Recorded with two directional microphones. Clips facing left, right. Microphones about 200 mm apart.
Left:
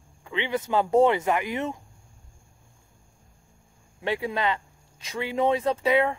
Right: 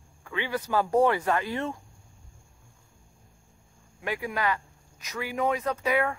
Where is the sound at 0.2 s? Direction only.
20° left (ahead or behind).